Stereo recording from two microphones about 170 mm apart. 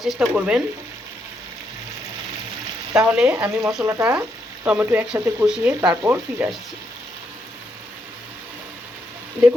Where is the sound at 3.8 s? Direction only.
15° right (ahead or behind).